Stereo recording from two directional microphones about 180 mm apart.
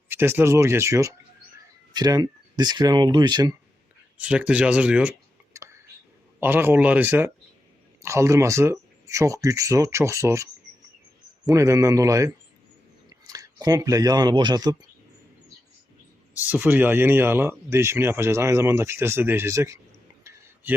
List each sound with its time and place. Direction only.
0.1 s speech: 10° right (ahead or behind)
4.2 s speech: 5° right (ahead or behind)
6.4 s speech: 10° right (ahead or behind)
16.4 s speech: 10° right (ahead or behind)